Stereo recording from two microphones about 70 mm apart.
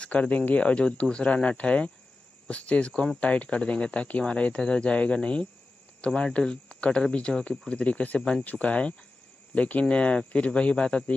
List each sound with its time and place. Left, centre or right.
0.0 s speech: centre